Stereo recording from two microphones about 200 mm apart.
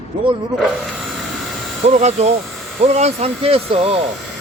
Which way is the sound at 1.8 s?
35° right (ahead or behind).